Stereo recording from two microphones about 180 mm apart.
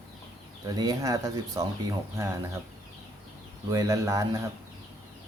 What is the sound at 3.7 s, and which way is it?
Speech, 20° right (ahead or behind).